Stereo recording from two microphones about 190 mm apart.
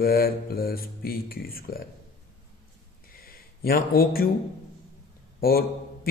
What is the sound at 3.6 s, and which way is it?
Speech, 50° left (ahead or behind).